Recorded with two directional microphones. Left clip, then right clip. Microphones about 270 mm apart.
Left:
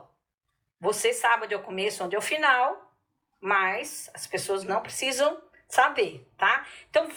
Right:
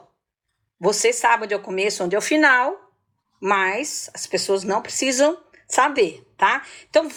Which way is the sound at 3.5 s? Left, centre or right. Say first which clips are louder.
Right 5 dB; centre.